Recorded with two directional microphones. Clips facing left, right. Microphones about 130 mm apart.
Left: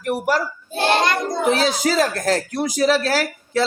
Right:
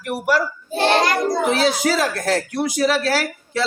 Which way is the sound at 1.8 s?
40° left (ahead or behind).